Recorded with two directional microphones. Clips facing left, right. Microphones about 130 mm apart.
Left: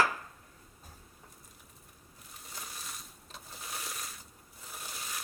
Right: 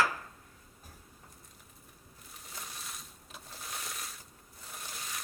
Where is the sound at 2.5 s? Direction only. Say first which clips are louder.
Even; centre (ahead or behind).